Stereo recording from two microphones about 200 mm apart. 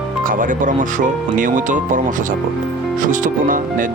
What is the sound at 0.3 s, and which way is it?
Speech, 40° right (ahead or behind).